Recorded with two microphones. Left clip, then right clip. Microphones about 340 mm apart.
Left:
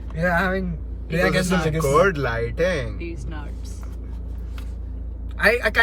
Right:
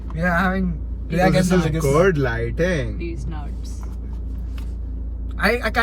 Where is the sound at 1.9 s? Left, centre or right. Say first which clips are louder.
Right 1 dB; centre.